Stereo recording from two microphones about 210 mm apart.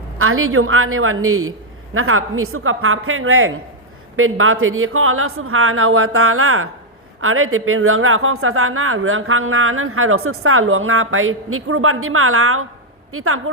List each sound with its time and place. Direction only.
0.2 s speech: 85° right